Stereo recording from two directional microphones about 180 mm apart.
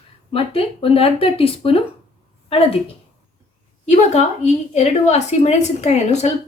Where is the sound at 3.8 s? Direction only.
40° left (ahead or behind).